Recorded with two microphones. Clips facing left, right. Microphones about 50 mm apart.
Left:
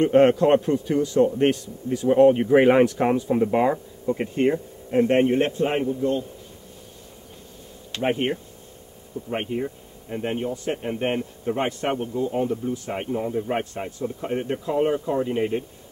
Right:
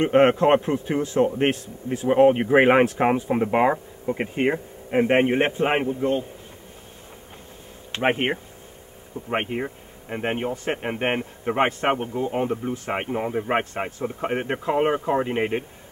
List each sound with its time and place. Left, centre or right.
0.0 s speech: right
7.9 s speech: right